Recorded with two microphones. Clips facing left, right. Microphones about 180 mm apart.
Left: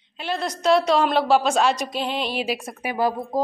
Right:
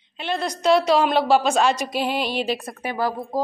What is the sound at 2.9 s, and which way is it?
Speech, 20° left (ahead or behind).